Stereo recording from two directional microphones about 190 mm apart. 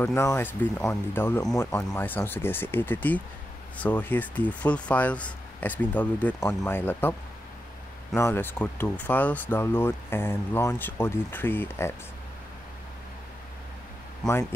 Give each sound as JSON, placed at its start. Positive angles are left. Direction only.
{"t": 0.0, "sound": "speech", "side_deg": 15}
{"t": 8.2, "sound": "speech", "side_deg": 10}
{"t": 14.2, "sound": "speech", "side_deg": 5}